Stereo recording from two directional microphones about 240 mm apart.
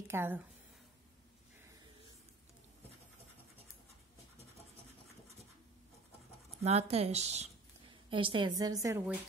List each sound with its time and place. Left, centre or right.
0.1 s speech: centre
6.6 s a woman's voice: right